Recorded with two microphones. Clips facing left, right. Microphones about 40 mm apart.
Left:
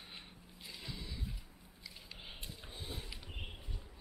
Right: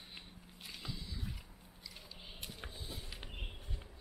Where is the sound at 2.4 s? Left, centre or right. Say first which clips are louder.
Right 2 dB; right.